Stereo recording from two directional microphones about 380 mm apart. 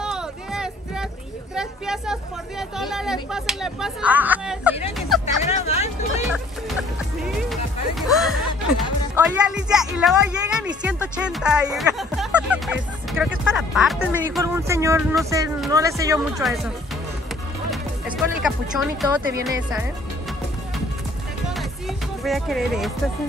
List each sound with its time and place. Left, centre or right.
0.0 s music: centre
1.5 s a sound: centre
2.7 s speech: centre
5.2 s speech: centre
7.4 s music: centre
9.1 s speech: centre
17.6 s music: centre